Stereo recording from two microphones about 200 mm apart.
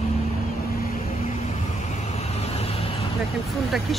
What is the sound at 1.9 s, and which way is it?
Vehicle, 30° left (ahead or behind).